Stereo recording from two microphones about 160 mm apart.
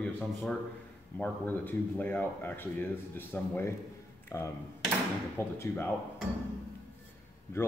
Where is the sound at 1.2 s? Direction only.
10° left (ahead or behind).